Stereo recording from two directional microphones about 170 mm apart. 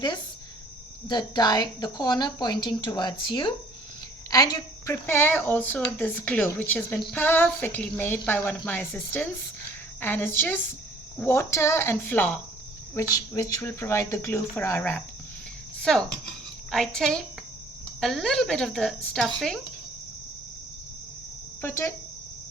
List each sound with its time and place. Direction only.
1.0 s speech: 25° left (ahead or behind); by 19.5 s centre (ahead or behind)
21.6 s speech: 15° left (ahead or behind)